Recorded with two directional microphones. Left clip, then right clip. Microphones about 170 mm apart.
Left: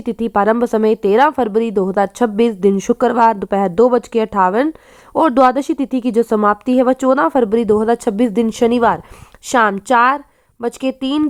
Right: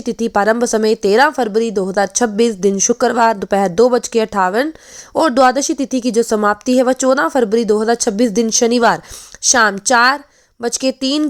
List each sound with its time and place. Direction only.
0.0 s speech: 25° right (ahead or behind)